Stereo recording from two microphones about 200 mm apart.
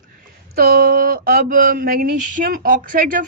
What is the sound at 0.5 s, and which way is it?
Speech, 45° right (ahead or behind).